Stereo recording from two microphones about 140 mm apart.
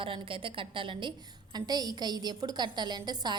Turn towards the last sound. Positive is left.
turn(degrees=-30)  # may be behind; listen again after turning